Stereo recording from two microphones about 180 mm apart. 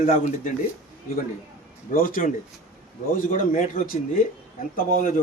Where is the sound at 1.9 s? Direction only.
50° left (ahead or behind).